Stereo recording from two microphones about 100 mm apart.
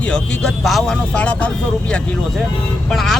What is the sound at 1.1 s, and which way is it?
Speech, 15° left (ahead or behind).